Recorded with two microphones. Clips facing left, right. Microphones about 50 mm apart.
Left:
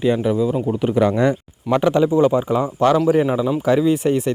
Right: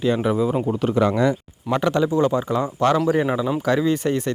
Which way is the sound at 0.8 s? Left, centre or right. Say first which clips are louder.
Left 3 dB; centre.